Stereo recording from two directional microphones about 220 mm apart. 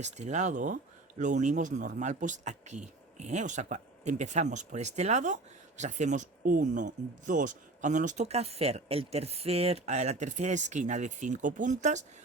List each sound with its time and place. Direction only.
0.0 s speech: 30° right (ahead or behind)